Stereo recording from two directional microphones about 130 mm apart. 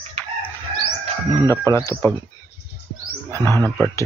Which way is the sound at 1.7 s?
25° left (ahead or behind).